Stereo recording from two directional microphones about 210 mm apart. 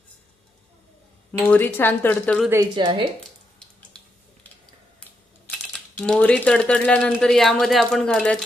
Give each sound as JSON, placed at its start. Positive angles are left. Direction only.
{"t": 1.3, "sound": "speech", "side_deg": 10}
{"t": 2.5, "sound": "a woman's voice", "side_deg": -20}
{"t": 5.5, "sound": "speech", "side_deg": 5}